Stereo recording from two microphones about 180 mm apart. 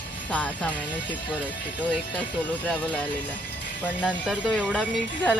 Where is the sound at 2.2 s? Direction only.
10° left (ahead or behind).